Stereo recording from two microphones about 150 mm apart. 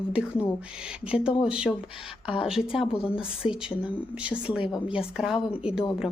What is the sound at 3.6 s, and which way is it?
Speech, 5° right (ahead or behind).